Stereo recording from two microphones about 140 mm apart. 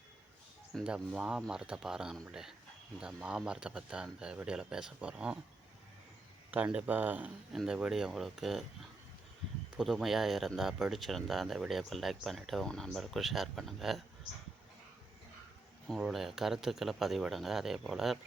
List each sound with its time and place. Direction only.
0.7 s speech: centre (ahead or behind)
6.5 s speech: 10° right (ahead or behind)
9.7 s speech: centre (ahead or behind)
15.9 s speech: centre (ahead or behind)